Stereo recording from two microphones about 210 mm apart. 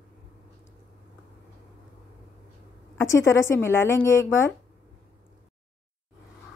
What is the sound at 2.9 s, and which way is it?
Speech, 15° left (ahead or behind).